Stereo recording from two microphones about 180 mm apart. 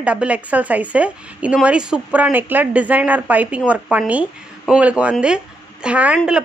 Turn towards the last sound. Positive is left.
turn(degrees=-5)  # may be behind; listen again after turning